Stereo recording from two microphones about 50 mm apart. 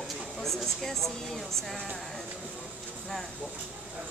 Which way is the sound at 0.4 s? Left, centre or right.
Centre.